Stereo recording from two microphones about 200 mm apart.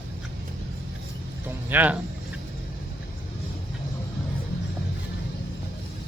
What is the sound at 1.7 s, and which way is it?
Speech, 10° right (ahead or behind).